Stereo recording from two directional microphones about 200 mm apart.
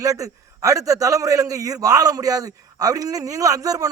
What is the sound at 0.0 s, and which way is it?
A man's voice, 15° right (ahead or behind).